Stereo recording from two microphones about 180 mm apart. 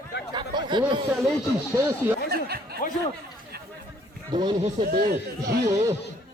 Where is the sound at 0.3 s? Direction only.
25° right (ahead or behind).